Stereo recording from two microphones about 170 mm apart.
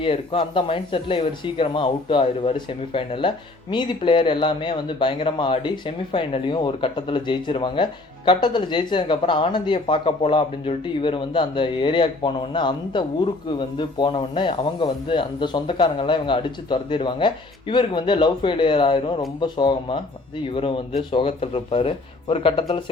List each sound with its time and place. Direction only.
0.0 s speech: 30° left (ahead or behind)